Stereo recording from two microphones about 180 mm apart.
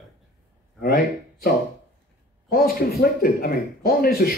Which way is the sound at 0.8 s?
55° left (ahead or behind).